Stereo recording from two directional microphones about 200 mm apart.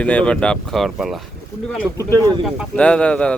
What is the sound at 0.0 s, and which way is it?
Speech, 5° left (ahead or behind).